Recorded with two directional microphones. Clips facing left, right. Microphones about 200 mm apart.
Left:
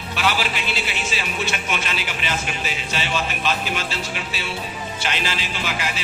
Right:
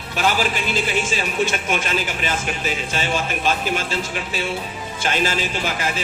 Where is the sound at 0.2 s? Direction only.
45° right (ahead or behind).